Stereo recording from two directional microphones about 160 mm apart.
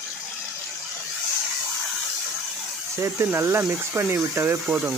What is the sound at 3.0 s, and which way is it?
Speech, 15° right (ahead or behind).